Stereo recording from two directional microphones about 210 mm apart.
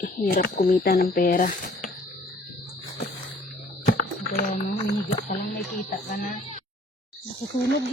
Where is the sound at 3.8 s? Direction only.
40° left (ahead or behind).